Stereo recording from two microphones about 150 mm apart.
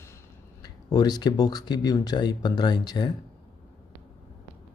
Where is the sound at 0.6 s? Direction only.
25° left (ahead or behind).